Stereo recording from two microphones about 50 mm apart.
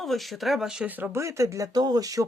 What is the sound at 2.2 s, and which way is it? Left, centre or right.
Speech, right.